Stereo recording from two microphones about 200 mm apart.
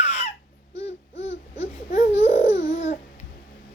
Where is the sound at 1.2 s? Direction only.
35° left (ahead or behind).